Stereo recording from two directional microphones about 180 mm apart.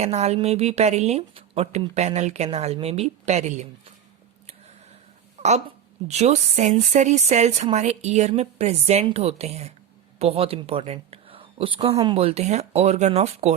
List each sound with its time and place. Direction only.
0.0 s speech: 35° right (ahead or behind)
4.4 s a sound: 35° right (ahead or behind)
5.4 s speech: 40° right (ahead or behind)